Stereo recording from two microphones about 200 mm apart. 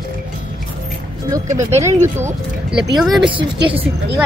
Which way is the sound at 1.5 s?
15° right (ahead or behind).